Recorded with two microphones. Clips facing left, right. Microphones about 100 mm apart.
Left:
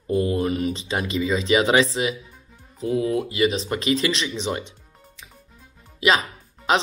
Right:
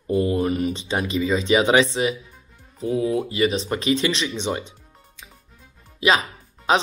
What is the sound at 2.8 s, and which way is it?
Speech, 30° right (ahead or behind).